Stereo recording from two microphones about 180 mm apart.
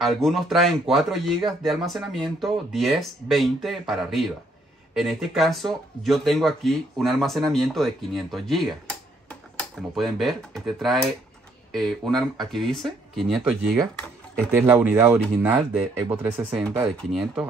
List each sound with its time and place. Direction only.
0.0 s speech: centre (ahead or behind)
16.9 s speech: centre (ahead or behind)